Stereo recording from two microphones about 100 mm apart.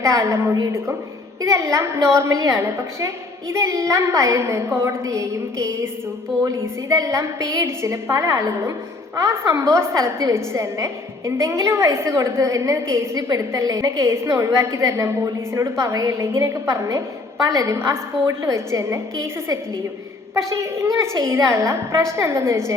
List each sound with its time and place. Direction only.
0.0 s a woman's voice: 30° right (ahead or behind)
6.9 s a woman's voice: 30° right (ahead or behind)